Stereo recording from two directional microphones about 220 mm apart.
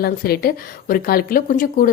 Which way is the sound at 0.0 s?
45° left (ahead or behind).